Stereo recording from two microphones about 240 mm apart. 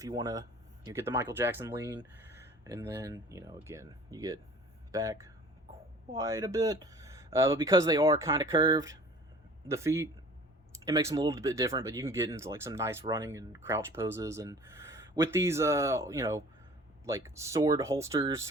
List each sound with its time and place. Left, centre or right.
0.0 s speech: centre